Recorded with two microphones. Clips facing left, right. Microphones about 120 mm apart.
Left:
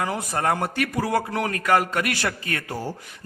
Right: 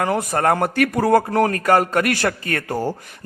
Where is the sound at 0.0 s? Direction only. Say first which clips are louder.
Right 6 dB; 55° right (ahead or behind).